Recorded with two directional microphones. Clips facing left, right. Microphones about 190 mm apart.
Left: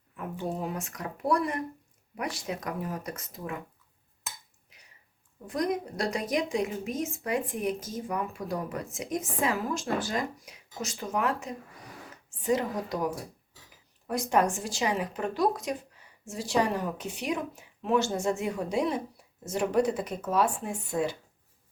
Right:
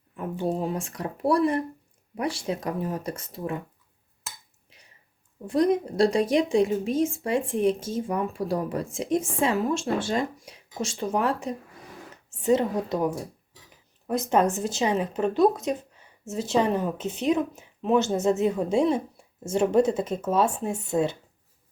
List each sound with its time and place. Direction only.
0.4 s a woman's voice: 30° right (ahead or behind)
4.7 s a sound: 30° right (ahead or behind)
5.5 s a woman's voice: 30° right (ahead or behind)